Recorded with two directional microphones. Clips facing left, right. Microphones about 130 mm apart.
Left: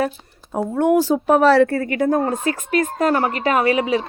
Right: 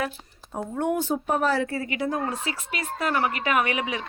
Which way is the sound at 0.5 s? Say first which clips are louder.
Left 9 dB; 90° left.